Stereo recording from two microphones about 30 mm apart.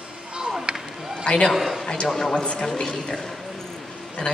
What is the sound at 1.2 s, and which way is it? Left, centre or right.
Speech, left.